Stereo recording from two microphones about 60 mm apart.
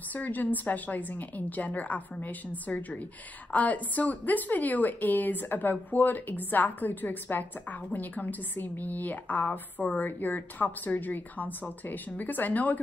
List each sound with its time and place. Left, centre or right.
0.1 s a woman's voice: left